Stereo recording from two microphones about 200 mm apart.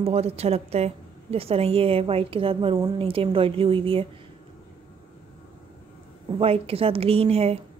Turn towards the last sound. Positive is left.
turn(degrees=-30)  # may be behind; listen again after turning